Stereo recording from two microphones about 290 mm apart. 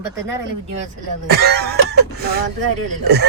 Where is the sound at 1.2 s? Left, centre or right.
Right.